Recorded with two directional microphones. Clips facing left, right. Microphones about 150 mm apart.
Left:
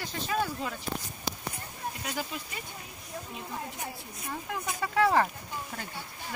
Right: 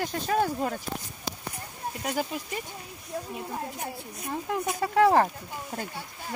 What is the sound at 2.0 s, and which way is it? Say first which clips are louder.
Speech: right 8 dB; 45° right (ahead or behind).